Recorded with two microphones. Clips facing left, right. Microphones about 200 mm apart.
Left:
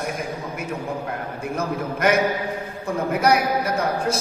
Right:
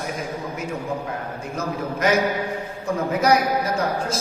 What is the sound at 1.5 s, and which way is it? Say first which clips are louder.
Speech: left 1 dB; 55° left (ahead or behind).